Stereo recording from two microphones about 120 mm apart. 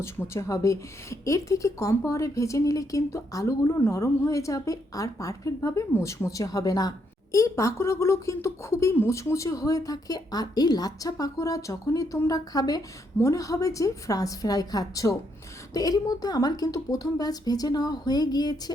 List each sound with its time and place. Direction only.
0.0 s a woman's voice: 25° left (ahead or behind)